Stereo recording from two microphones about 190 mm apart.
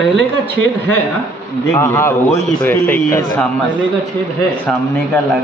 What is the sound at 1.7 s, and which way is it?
A man's voice, 15° left (ahead or behind).